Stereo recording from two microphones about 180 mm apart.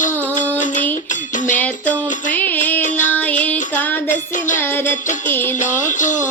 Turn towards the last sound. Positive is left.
turn(degrees=45)  # may be behind; listen again after turning